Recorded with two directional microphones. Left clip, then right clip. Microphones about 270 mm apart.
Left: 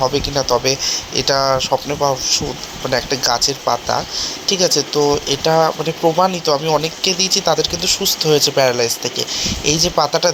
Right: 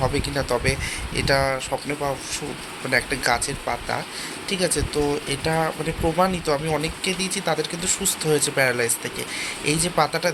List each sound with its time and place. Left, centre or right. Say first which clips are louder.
0.0 s speech: left 7 dB; centre